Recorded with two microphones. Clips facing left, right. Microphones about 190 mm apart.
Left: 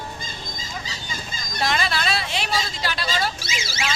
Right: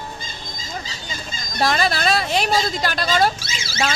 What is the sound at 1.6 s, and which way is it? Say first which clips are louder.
Speech: right 5 dB; 40° right (ahead or behind).